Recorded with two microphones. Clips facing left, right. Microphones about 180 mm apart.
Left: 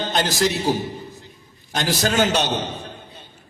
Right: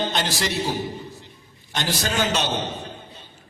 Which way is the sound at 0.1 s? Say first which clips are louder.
Left 5 dB; 45° left (ahead or behind).